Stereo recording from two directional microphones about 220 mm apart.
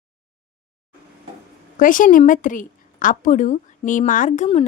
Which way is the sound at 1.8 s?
35° left (ahead or behind).